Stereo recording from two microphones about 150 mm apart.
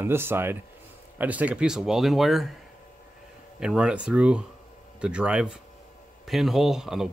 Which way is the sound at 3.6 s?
5° right (ahead or behind).